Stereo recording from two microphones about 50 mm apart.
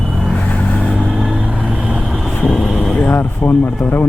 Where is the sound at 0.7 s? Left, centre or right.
Left.